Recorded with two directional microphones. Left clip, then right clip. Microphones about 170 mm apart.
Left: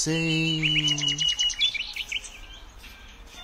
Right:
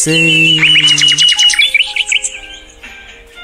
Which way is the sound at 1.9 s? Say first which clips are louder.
Right 18 dB; 50° right (ahead or behind).